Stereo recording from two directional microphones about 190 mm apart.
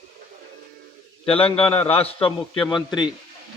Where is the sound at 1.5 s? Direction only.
30° left (ahead or behind).